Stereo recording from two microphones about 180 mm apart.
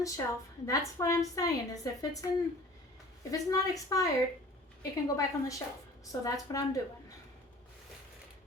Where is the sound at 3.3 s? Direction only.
20° left (ahead or behind).